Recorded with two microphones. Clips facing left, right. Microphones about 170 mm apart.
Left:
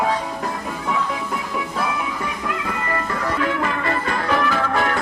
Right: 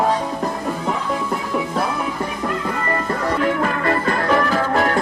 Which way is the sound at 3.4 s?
40° right (ahead or behind).